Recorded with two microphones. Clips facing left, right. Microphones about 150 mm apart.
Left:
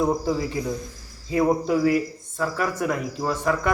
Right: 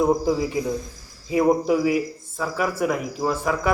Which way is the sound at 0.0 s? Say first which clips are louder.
Right 3 dB; 15° right (ahead or behind).